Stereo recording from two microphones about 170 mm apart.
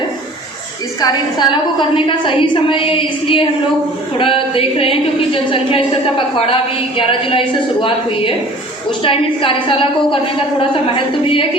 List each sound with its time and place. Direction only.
1.0 s a woman's voice: 25° left (ahead or behind)